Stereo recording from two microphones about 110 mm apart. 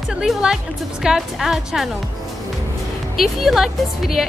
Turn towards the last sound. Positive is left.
turn(degrees=0)  # may be behind; listen again after turning